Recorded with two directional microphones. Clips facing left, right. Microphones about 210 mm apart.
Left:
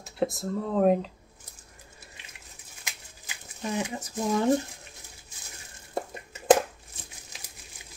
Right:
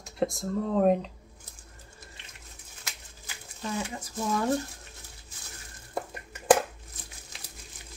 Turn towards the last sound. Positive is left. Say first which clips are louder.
# left 1 dB
turn(degrees=25)  # may be behind; listen again after turning